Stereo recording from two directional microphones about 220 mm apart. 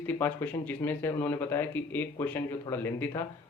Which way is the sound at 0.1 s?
10° left (ahead or behind).